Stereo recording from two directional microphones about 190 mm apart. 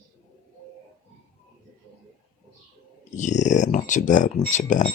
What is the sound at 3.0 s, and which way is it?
Speech, 40° left (ahead or behind).